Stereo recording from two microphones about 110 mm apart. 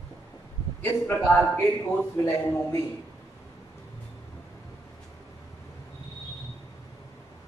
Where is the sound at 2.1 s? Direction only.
30° left (ahead or behind).